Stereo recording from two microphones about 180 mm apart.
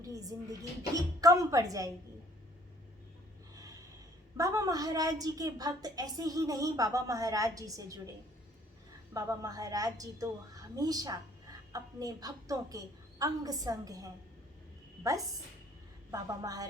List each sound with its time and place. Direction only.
0.0 s a woman's voice: 20° right (ahead or behind)
4.4 s a woman's voice: 20° right (ahead or behind)
9.1 s a woman's voice: 20° right (ahead or behind)